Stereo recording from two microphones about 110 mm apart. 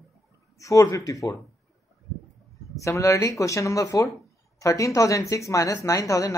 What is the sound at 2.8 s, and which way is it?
Speech, 30° left (ahead or behind).